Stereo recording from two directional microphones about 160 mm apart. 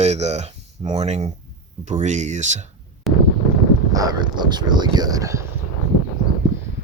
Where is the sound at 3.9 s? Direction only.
25° right (ahead or behind).